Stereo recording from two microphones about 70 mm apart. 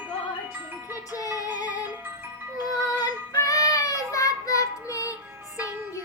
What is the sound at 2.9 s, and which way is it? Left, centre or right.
Child singing, left.